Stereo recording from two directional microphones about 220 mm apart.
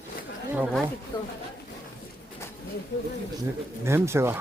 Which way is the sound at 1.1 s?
20° left (ahead or behind).